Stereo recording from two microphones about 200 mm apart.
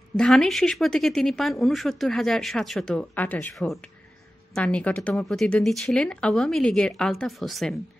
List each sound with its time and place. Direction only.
0.2 s speech: 5° left (ahead or behind)